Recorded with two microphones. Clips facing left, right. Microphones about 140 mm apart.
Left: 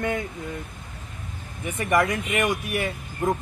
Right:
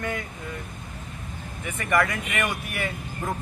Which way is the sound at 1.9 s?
20° left (ahead or behind).